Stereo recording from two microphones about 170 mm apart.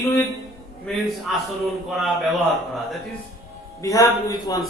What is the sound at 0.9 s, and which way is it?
A man's voice, centre (ahead or behind).